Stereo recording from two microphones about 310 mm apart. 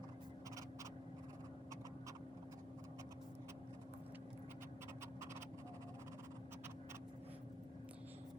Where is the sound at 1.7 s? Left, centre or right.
Centre.